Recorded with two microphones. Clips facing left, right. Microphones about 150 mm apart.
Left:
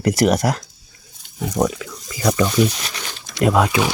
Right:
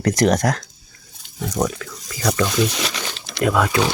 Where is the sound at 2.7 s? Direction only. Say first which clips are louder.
Right 5 dB; 85° right.